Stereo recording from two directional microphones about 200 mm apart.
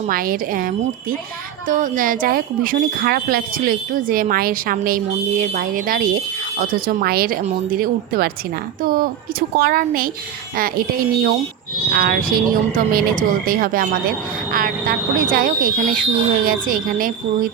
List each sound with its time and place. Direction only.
0.1 s speech: 45° right (ahead or behind)